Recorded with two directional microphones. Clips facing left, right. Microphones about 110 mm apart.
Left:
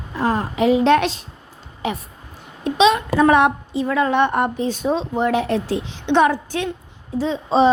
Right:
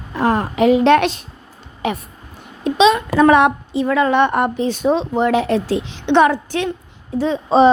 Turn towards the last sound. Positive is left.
turn(degrees=-55)  # may be behind; listen again after turning